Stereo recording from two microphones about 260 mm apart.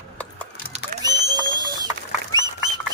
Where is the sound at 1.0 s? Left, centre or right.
Centre.